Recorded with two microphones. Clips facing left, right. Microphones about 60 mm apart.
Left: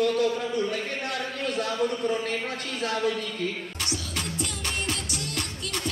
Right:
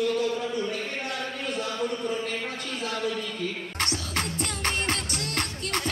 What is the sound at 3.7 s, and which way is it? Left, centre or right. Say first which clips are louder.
Music: right 3 dB; right.